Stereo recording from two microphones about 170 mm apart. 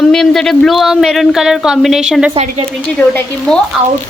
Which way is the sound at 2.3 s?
35° right (ahead or behind).